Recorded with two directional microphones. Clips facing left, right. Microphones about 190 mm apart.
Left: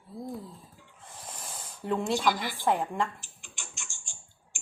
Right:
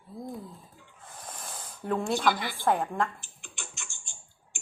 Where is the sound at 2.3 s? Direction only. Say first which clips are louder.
Right 1 dB; centre (ahead or behind).